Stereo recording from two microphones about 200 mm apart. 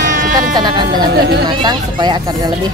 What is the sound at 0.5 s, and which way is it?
Speech, 20° right (ahead or behind).